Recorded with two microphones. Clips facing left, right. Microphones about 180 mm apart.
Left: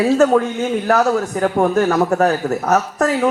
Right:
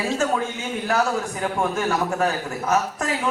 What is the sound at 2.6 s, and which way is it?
Speech, 65° left (ahead or behind).